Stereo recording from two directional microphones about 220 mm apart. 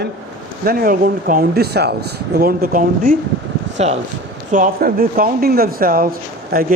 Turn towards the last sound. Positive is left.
turn(degrees=-40)  # may be behind; listen again after turning